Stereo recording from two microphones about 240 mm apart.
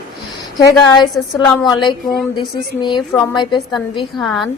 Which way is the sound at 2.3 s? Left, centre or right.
Centre.